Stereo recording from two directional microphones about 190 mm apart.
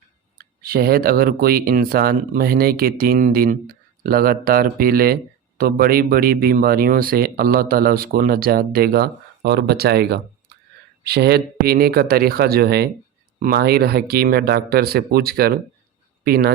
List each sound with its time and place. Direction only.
0.3 s speech: 50° right (ahead or behind)